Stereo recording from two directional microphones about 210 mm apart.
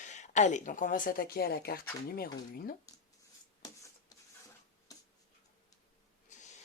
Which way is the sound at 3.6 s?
20° left (ahead or behind).